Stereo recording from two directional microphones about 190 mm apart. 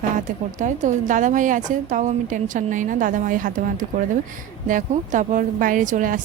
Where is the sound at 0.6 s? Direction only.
40° right (ahead or behind).